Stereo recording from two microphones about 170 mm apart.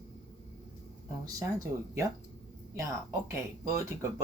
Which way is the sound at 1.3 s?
20° right (ahead or behind).